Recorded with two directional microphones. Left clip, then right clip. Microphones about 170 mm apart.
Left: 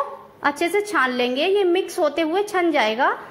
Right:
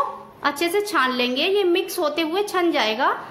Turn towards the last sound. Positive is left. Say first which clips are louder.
# left 1 dB
turn(degrees=25)  # may be behind; listen again after turning